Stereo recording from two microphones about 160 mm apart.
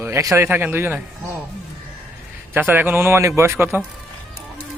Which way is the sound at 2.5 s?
15° right (ahead or behind).